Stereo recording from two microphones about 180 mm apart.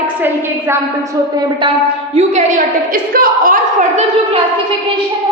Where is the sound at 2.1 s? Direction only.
40° right (ahead or behind).